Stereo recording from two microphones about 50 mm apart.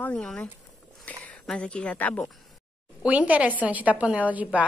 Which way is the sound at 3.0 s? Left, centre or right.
Right.